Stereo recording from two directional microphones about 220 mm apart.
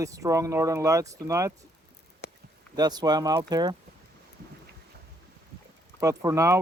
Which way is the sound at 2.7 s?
20° right (ahead or behind).